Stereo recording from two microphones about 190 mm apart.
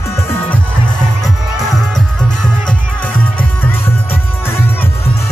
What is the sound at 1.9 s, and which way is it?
Music, 5° left (ahead or behind).